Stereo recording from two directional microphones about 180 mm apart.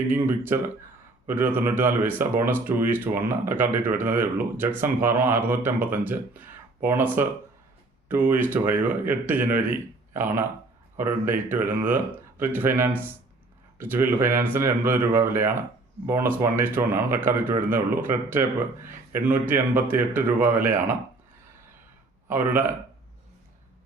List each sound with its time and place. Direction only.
0.1 s speech: 10° right (ahead or behind)
8.3 s speech: 10° right (ahead or behind)
22.3 s speech: 10° right (ahead or behind)